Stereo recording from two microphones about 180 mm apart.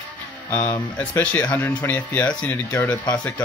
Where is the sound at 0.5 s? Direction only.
15° left (ahead or behind).